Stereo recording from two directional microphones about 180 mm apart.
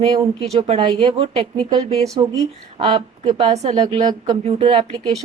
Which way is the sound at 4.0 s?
25° right (ahead or behind).